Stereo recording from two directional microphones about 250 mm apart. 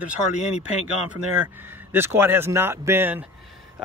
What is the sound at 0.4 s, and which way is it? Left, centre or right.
Speech, left.